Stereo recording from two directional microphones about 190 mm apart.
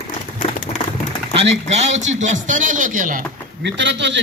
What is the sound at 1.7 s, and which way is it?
Speech, 35° right (ahead or behind).